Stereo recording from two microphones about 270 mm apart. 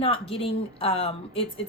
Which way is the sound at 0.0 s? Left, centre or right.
Left.